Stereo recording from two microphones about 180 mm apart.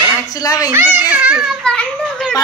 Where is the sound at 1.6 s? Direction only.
5° left (ahead or behind).